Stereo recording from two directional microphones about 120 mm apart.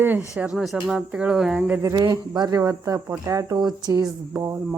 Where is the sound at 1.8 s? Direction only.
30° right (ahead or behind).